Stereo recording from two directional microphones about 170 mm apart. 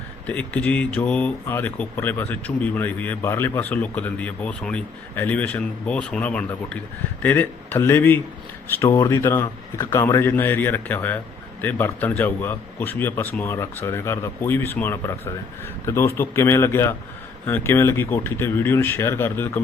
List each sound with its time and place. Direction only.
0.3 s speech: 10° left (ahead or behind)